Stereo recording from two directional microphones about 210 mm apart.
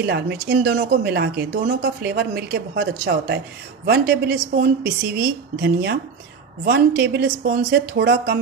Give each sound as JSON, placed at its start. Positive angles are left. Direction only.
{"t": 0.0, "sound": "speech", "side_deg": -55}